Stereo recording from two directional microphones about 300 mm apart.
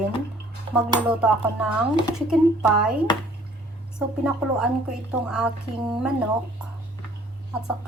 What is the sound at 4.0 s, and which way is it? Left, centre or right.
A woman's voice, centre.